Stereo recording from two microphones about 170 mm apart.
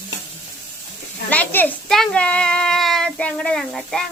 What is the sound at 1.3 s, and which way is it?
A child's voice, 10° left (ahead or behind).